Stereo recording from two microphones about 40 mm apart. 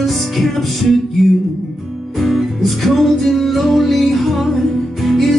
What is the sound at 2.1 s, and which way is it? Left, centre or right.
Music, centre.